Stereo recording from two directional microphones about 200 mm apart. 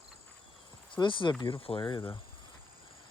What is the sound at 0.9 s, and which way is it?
Speech, 25° left (ahead or behind).